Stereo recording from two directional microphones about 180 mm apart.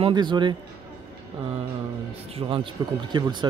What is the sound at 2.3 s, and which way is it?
Speech, 30° right (ahead or behind).